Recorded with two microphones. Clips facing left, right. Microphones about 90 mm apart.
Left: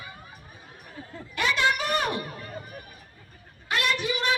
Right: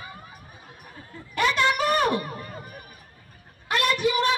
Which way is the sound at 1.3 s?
45° right (ahead or behind).